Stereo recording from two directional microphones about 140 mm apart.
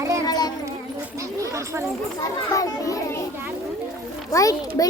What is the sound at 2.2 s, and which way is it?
A child's voice, 25° left (ahead or behind).